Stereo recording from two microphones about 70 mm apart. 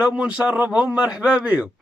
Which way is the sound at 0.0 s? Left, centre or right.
Centre.